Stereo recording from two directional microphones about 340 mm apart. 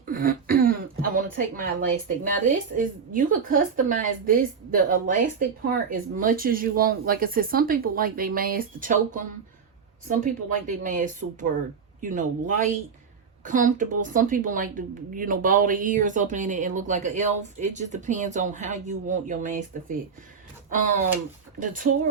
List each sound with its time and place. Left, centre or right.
0.0 s speech: right
10.8 s a woman's voice: right